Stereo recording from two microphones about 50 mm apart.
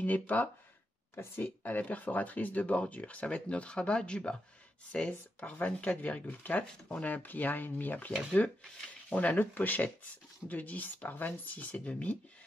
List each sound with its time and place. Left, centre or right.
0.0 s speech: left; by 5.1 s centre
5.4 s speech: left
9.1 s speech: left